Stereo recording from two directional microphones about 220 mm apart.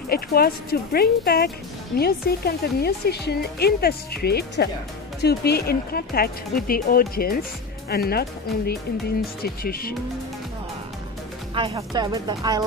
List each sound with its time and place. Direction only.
0.1 s speech: 45° left (ahead or behind)
11.5 s speech: 25° right (ahead or behind)